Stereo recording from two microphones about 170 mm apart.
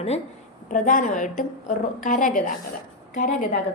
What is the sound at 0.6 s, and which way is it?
A woman's voice, 50° left (ahead or behind).